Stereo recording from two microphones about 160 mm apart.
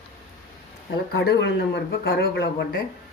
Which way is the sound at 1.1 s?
90° left.